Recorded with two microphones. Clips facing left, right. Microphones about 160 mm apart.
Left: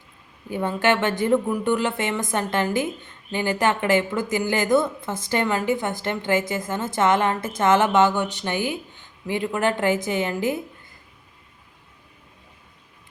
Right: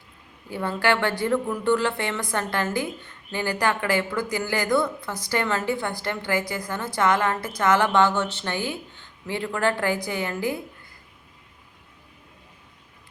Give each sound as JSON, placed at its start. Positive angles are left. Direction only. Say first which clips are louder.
{"t": 0.5, "sound": "speech", "louder": "left 2 dB", "side_deg": 15}